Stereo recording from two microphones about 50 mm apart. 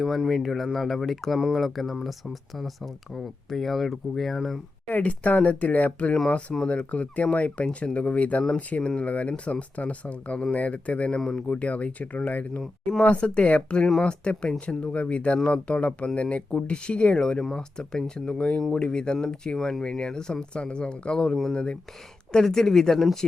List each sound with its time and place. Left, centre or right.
0.3 s speech: centre
1.4 s speech: centre
1.6 s speech: centre
4.9 s speech: left
6.2 s speech: centre
6.7 s speech: left
11.2 s speech: centre
11.5 s speech: left
13.1 s speech: left; by 23.1 s centre